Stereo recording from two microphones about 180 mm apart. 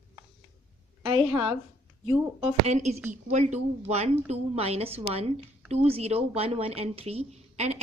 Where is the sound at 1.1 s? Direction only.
30° right (ahead or behind).